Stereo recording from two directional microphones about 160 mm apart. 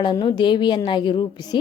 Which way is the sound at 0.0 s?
30° left (ahead or behind).